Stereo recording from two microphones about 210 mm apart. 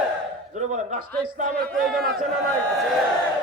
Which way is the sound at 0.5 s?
35° right (ahead or behind).